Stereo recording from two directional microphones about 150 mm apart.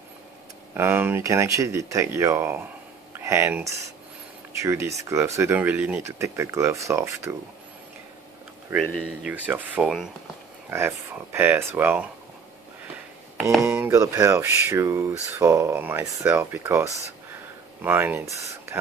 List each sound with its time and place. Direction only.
0.7 s speech: 15° right (ahead or behind)
9.0 s speech: 10° right (ahead or behind)
13.6 s speech: 15° right (ahead or behind)